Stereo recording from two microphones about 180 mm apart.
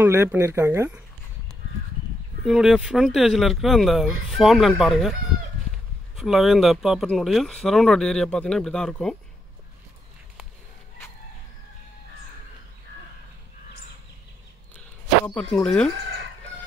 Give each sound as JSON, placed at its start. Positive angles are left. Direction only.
{"t": 0.0, "sound": "speech", "side_deg": -10}
{"t": 2.4, "sound": "speech", "side_deg": -5}
{"t": 6.1, "sound": "speech", "side_deg": 0}
{"t": 15.3, "sound": "speech", "side_deg": 5}